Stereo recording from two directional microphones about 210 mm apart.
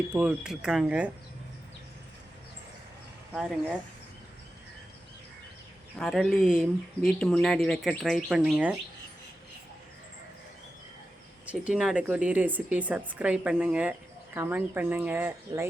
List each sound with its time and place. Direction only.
0.1 s speech: 5° right (ahead or behind)
3.3 s speech: 5° right (ahead or behind)
6.0 s speech: centre (ahead or behind)
11.4 s speech: 5° right (ahead or behind)